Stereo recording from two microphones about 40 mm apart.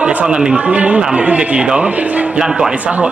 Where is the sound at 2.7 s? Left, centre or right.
Right.